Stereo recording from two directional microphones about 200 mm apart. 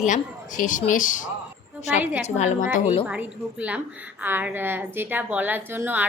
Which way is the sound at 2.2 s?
35° left (ahead or behind).